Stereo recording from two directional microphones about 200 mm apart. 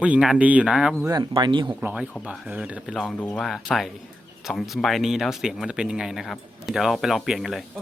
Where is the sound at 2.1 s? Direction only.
5° left (ahead or behind).